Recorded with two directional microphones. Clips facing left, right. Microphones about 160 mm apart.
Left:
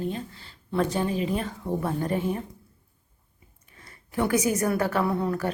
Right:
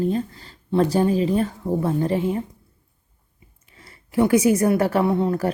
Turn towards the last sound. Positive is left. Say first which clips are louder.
# right 5 dB
turn(degrees=-25)  # may be behind; listen again after turning